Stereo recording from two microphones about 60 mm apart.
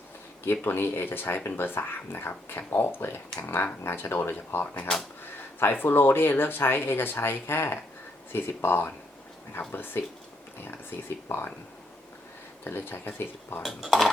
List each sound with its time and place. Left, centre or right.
0.6 s speech: left
11.3 s speech: left
12.6 s speech: left
13.7 s speech: centre